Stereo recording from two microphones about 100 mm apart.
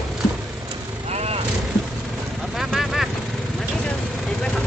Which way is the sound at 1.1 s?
90° right.